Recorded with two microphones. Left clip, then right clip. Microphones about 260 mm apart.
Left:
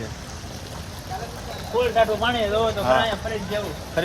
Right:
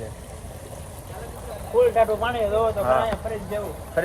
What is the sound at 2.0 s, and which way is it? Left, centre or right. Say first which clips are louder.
Speech: left 1 dB; left.